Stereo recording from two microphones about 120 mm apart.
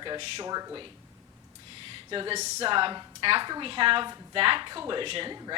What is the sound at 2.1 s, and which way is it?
A woman's voice, 45° right (ahead or behind).